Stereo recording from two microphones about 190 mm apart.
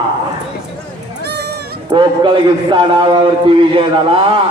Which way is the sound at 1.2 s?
60° right (ahead or behind).